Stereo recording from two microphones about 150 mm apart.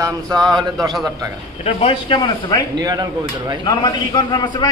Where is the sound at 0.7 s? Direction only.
Centre (ahead or behind).